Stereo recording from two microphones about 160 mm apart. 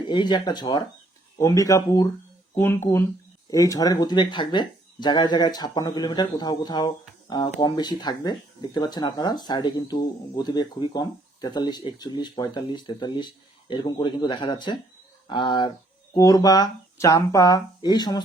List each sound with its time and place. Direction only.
0.0 s speech: 30° left (ahead or behind)